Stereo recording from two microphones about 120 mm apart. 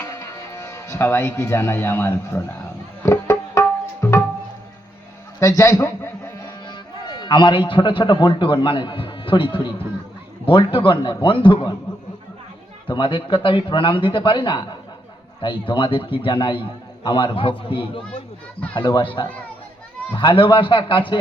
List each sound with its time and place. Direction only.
0.0 s speech: 25° left (ahead or behind)
3.0 s tabla: 25° left (ahead or behind)
5.4 s a man's voice: 25° left (ahead or behind)
7.2 s a man's voice: 40° left (ahead or behind)
12.9 s a man's voice: 45° left (ahead or behind)
20.1 s a man's voice: 45° left (ahead or behind)